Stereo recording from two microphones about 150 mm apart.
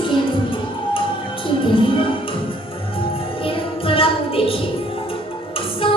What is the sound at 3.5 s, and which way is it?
Music, 35° left (ahead or behind).